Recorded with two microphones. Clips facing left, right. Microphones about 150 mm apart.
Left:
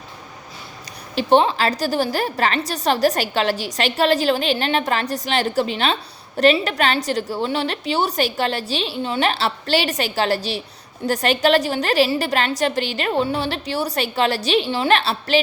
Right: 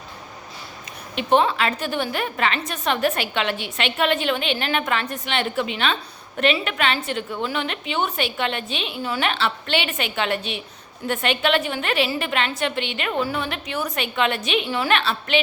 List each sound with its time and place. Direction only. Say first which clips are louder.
1.1 s a woman's voice: left 3 dB; 30° left (ahead or behind)